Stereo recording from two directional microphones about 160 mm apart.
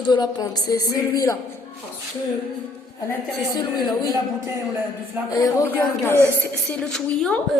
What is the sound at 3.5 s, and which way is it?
Speech, 25° left (ahead or behind).